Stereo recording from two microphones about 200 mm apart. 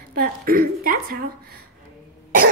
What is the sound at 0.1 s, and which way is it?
A woman's voice, 45° right (ahead or behind).